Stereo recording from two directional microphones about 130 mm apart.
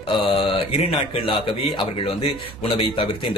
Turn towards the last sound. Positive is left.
turn(degrees=45)  # may be behind; listen again after turning